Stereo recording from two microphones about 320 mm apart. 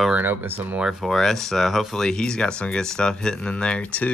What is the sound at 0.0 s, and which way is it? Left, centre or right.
Speech, centre.